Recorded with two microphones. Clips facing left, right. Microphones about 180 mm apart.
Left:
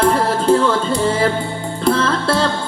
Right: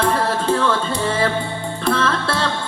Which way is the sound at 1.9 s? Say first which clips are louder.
Left 4 dB; 30° left (ahead or behind).